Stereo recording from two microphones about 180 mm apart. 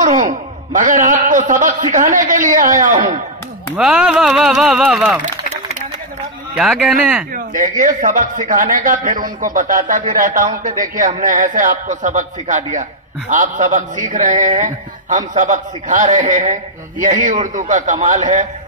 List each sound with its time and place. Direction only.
0.0 s a man's voice: 45° right (ahead or behind)
3.7 s speech: 5° right (ahead or behind)
5.2 s a sound: 40° right (ahead or behind)
6.5 s speech: 5° right (ahead or behind)
7.3 s a man's voice: 45° right (ahead or behind)